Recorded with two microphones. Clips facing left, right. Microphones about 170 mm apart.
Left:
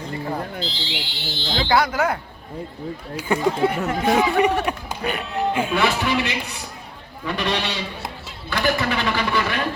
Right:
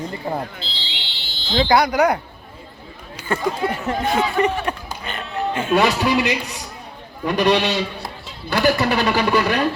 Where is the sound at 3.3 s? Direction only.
15° left (ahead or behind).